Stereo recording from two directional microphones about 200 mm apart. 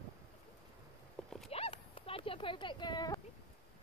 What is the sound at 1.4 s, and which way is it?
Clip-clop, 30° left (ahead or behind).